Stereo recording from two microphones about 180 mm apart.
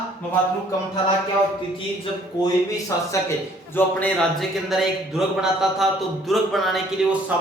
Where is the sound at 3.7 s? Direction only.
10° left (ahead or behind).